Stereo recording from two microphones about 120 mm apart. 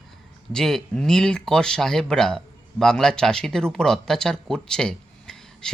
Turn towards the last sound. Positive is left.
turn(degrees=5)  # may be behind; listen again after turning